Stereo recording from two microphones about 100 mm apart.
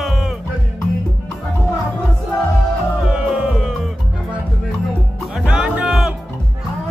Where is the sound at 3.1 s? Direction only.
10° right (ahead or behind).